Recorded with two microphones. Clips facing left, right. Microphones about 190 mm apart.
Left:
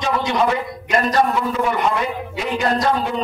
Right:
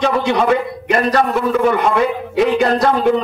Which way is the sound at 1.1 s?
60° right (ahead or behind).